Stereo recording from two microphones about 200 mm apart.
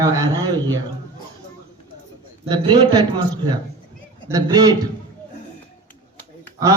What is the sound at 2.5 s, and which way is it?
Speech, 20° right (ahead or behind).